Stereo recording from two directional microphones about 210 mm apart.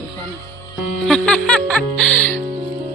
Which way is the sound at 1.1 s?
5° left (ahead or behind).